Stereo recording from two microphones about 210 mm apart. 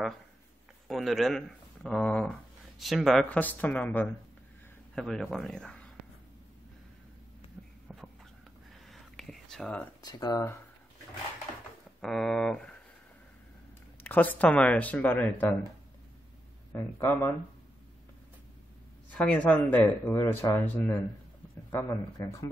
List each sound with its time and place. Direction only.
0.8 s speech: centre (ahead or behind)
7.6 s a sound: 5° right (ahead or behind)
8.8 s whispering: centre (ahead or behind)
10.0 s speech: 20° left (ahead or behind)
12.0 s speech: centre (ahead or behind)
14.0 s speech: 10° left (ahead or behind)
16.7 s speech: 10° left (ahead or behind)
19.0 s speech: 5° left (ahead or behind)